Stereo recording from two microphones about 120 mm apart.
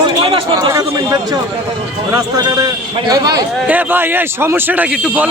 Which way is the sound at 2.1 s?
30° right (ahead or behind).